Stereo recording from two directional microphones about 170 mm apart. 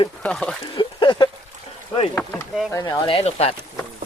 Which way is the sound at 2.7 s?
20° left (ahead or behind).